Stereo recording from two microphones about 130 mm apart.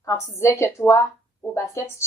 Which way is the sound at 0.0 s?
20° left (ahead or behind).